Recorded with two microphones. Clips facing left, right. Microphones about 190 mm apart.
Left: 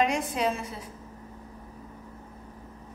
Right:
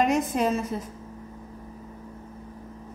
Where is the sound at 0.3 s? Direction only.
45° right (ahead or behind).